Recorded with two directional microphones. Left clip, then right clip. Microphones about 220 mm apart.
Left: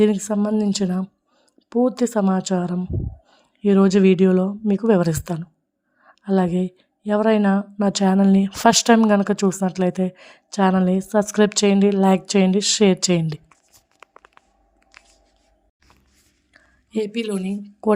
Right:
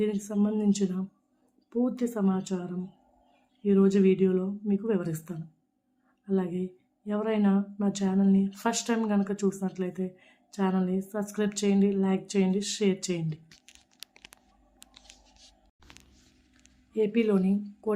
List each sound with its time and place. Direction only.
0.0 s speech: 45° left (ahead or behind)
17.1 s a woman's voice: centre (ahead or behind)
17.4 s a woman's voice: 45° left (ahead or behind)